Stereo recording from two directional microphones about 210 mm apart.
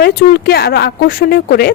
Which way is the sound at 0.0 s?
50° left (ahead or behind).